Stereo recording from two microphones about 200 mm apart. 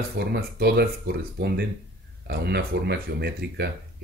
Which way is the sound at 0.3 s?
50° right (ahead or behind).